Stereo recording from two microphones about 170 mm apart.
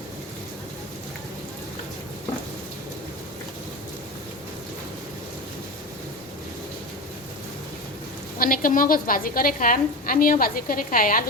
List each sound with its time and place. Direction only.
8.4 s a woman's voice: 55° left (ahead or behind)